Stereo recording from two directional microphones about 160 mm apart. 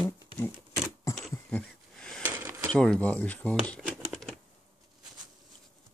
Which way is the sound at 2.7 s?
5° left (ahead or behind).